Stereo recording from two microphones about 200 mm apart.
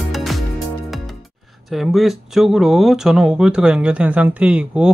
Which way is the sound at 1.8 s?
Centre (ahead or behind).